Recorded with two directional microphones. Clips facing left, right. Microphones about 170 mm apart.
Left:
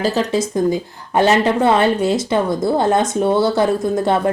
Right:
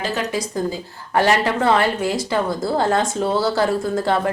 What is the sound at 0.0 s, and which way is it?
A woman's voice, 25° left (ahead or behind).